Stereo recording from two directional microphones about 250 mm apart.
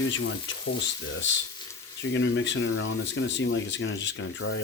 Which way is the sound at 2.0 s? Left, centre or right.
Left.